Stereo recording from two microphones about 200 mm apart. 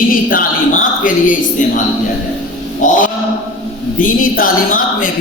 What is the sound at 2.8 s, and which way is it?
Speech, 40° left (ahead or behind).